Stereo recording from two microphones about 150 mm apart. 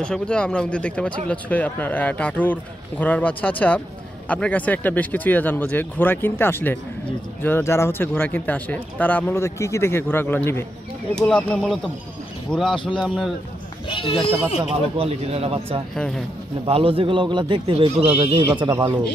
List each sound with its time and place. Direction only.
0.0 s speech: 5° left (ahead or behind)
12.7 s a man's voice: 35° left (ahead or behind)
13.0 s speech: 5° left (ahead or behind)
13.8 s a man's voice: 35° left (ahead or behind)
14.6 s speech: 40° right (ahead or behind)
15.9 s speech: centre (ahead or behind)
16.6 s speech: 40° right (ahead or behind); by 18.9 s 20° right (ahead or behind)